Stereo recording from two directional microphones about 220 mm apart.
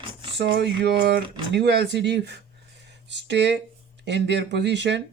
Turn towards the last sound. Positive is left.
turn(degrees=-50)  # may be behind; listen again after turning